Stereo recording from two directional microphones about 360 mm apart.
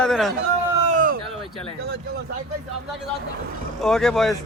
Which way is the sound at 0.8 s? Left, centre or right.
Right.